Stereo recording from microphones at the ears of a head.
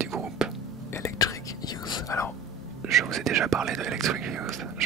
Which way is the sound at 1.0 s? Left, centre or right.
Left.